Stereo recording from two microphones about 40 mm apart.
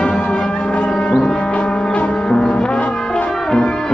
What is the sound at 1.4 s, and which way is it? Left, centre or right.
Music, left.